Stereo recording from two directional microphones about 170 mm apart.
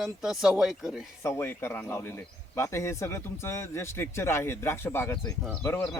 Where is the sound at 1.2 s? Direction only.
15° left (ahead or behind).